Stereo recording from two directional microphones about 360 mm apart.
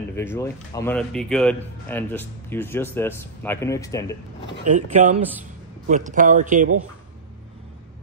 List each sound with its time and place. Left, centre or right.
0.1 s a man's voice: centre
4.6 s speech: centre